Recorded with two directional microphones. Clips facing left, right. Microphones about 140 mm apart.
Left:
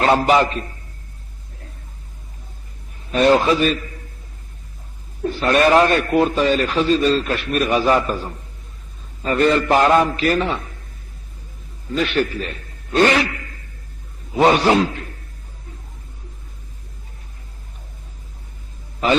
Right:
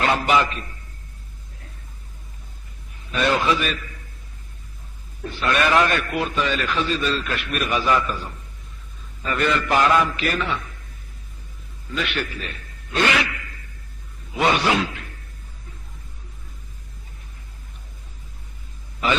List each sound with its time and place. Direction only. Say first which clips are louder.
0.0 s a man's voice: left 5 dB; 35° left (ahead or behind)
3.1 s a man's voice: left 6 dB; 40° left (ahead or behind)
5.2 s a man's voice: left 6 dB; 35° left (ahead or behind)
11.9 s a man's voice: left 7 dB; 40° left (ahead or behind)